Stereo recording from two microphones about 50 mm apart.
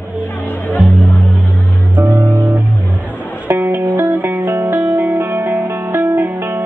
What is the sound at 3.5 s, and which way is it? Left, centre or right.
Music, right.